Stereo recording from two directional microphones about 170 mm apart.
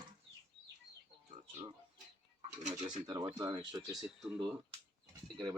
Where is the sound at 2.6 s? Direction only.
45° right (ahead or behind).